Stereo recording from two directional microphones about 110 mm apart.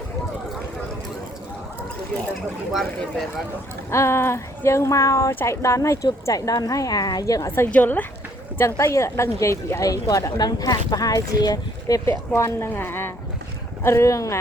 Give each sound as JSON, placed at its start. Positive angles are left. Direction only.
{"t": 3.8, "sound": "a woman's voice", "side_deg": 25}
{"t": 8.5, "sound": "speech", "side_deg": 25}